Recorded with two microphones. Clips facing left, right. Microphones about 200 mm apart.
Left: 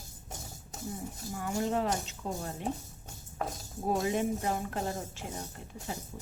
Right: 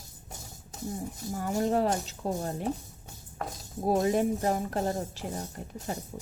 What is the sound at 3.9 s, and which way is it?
A woman's voice, 35° right (ahead or behind).